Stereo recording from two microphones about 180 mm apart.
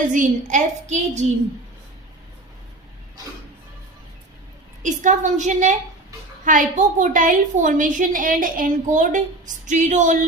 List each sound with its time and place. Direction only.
0.1 s a woman's voice: 45° right (ahead or behind)
4.8 s a woman's voice: 45° right (ahead or behind)